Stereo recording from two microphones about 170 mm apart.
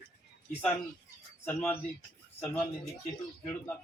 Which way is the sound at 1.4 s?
10° left (ahead or behind).